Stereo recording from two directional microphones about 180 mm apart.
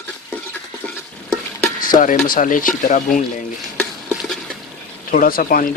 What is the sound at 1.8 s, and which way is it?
Speech, 50° left (ahead or behind).